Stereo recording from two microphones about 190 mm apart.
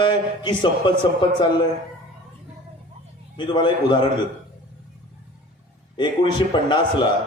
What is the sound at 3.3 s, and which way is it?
Speech, 25° left (ahead or behind).